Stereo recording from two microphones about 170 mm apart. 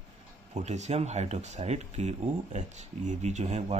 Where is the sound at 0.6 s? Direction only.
40° right (ahead or behind).